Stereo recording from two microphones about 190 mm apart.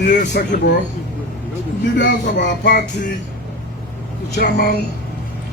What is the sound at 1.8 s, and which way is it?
Speech, 70° left (ahead or behind).